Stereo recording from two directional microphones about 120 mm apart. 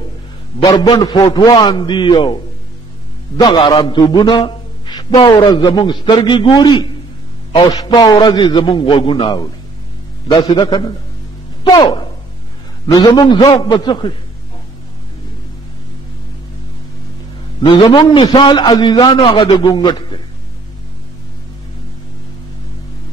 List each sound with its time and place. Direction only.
0.7 s a man's voice: 35° left (ahead or behind)
17.6 s a man's voice: 50° left (ahead or behind)
17.8 s a man's voice: 40° left (ahead or behind)